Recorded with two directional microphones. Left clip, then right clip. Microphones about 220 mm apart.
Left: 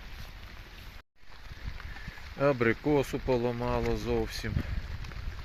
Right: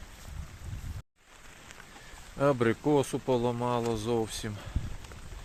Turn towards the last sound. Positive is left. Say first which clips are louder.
# right 1 dB
turn(degrees=-5)  # may be behind; listen again after turning